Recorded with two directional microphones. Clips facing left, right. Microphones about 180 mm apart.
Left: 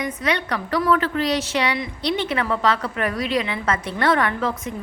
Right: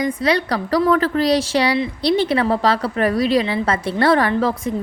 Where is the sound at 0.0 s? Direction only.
35° right (ahead or behind).